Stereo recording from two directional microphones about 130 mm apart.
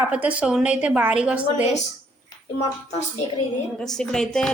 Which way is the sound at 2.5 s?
55° left (ahead or behind).